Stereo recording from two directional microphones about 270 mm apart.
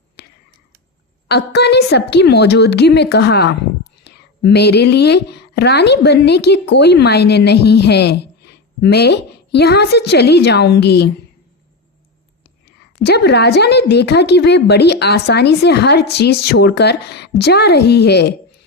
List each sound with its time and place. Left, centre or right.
0.2 s a sound: left
1.3 s speech: left
13.0 s speech: left